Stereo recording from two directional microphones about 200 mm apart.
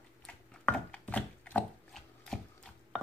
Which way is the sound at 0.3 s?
5° left (ahead or behind).